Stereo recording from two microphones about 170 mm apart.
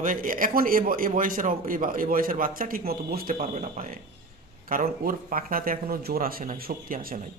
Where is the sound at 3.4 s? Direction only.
40° right (ahead or behind); by 7.1 s 60° right (ahead or behind).